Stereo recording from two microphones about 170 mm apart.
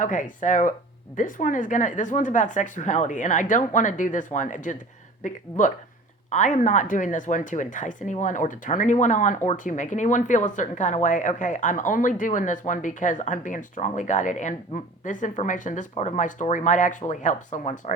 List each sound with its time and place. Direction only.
0.0 s speech: 50° left (ahead or behind)